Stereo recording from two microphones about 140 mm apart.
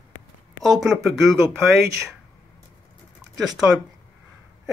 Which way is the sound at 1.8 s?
20° right (ahead or behind).